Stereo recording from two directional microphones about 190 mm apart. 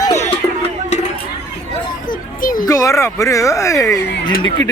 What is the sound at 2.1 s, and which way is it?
Children playing, 45° left (ahead or behind).